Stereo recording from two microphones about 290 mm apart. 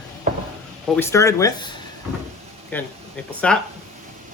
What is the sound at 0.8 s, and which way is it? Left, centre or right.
Speech, centre.